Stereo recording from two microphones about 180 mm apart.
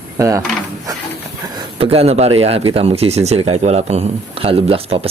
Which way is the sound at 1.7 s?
35° right (ahead or behind).